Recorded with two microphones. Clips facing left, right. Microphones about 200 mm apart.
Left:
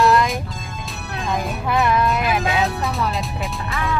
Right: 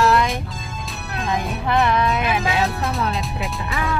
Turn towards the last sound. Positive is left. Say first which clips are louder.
# even
turn(degrees=0)  # may be behind; listen again after turning